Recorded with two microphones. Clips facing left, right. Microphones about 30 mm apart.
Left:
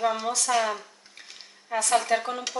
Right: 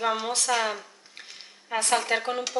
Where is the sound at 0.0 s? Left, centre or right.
Right.